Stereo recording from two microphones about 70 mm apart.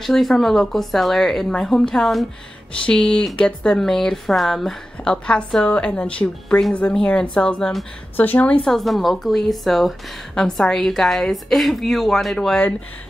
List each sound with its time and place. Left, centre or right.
0.0 s a woman's voice: centre
2.8 s a woman's voice: centre
8.2 s a woman's voice: left
8.6 s a woman's voice: centre